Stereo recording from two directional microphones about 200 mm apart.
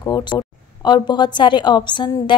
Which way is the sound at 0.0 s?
20° left (ahead or behind).